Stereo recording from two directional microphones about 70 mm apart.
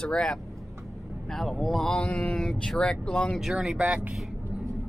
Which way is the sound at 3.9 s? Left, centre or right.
Centre.